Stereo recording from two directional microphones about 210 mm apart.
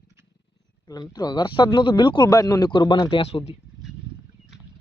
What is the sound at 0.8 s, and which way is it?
Speech, 20° left (ahead or behind).